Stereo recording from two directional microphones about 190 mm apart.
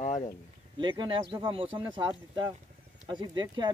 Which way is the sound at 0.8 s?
25° right (ahead or behind).